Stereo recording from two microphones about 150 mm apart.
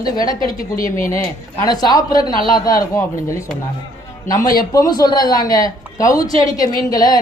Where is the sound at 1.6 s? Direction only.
25° left (ahead or behind).